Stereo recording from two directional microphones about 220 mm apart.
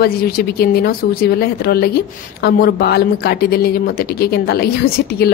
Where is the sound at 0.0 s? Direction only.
45° left (ahead or behind).